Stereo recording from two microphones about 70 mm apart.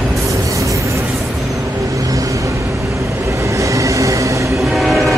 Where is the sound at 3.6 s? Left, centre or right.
Right.